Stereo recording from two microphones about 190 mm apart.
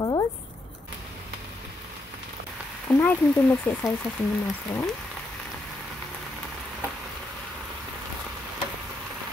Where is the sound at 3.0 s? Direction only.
10° left (ahead or behind).